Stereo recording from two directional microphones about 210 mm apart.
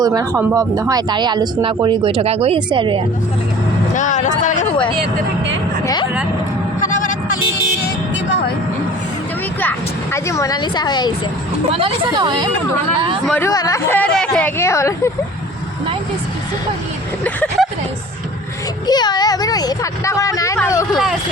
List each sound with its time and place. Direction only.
0.0 s speech: 15° right (ahead or behind)
3.9 s vehicle: 35° left (ahead or behind)
9.6 s speech: 10° left (ahead or behind)
11.7 s speech: 25° right (ahead or behind)
13.2 s speech: 5° left (ahead or behind)
13.5 s speech: 15° left (ahead or behind)
17.2 s speech: 5° left (ahead or behind)
18.9 s speech: 20° left (ahead or behind)
20.9 s speech: centre (ahead or behind)